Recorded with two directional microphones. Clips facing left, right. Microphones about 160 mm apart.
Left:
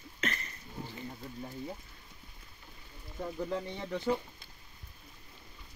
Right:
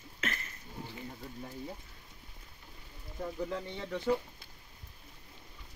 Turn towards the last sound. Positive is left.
turn(degrees=10)  # may be behind; listen again after turning